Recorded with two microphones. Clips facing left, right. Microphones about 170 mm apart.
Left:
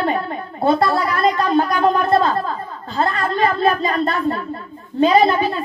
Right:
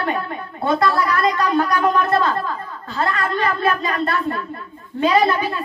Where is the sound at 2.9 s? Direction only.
30° left (ahead or behind).